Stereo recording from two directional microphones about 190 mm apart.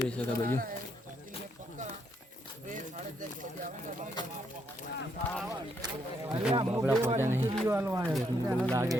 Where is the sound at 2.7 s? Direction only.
45° right (ahead or behind).